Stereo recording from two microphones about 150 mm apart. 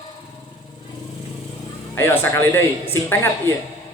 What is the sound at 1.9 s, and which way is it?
Speech, 15° left (ahead or behind).